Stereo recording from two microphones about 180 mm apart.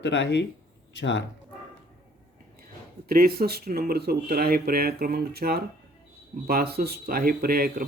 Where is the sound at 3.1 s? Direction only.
55° right (ahead or behind).